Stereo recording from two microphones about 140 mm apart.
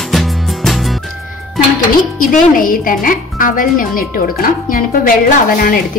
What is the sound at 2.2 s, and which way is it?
Speech, 80° left.